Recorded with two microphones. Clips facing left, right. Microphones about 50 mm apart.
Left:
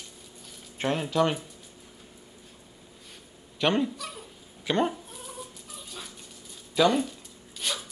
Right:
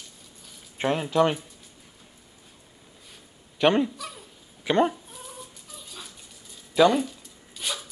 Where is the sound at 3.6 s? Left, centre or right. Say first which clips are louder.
Right 4 dB; centre.